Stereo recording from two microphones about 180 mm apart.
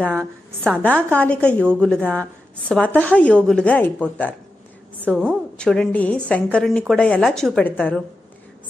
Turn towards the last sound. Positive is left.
turn(degrees=10)  # may be behind; listen again after turning